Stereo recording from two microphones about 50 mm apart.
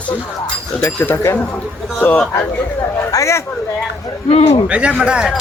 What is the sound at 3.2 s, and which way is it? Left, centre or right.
Speech, left.